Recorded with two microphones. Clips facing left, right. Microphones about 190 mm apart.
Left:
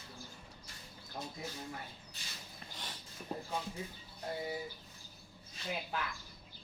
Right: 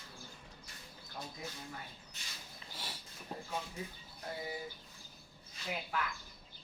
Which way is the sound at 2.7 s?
10° right (ahead or behind).